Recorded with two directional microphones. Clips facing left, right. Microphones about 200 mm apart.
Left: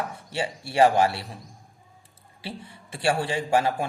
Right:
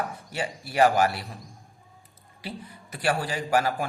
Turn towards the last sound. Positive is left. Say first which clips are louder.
# left 2 dB
turn(degrees=25)  # may be behind; listen again after turning